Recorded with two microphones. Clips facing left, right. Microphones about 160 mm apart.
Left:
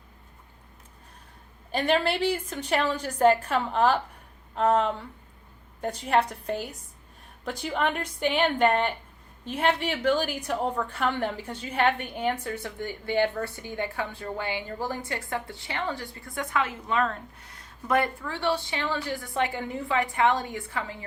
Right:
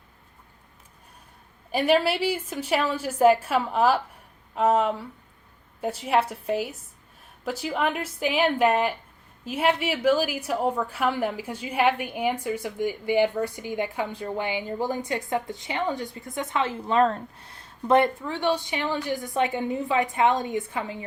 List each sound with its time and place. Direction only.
1.7 s a woman's voice: 10° right (ahead or behind)